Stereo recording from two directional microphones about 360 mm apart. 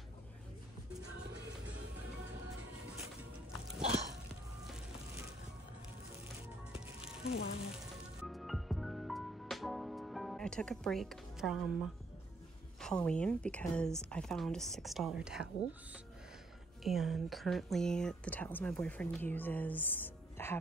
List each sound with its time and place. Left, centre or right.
6.7 s music: centre
7.2 s frying: centre
8.2 s music: centre
12.8 s speech: centre
16.8 s speech: centre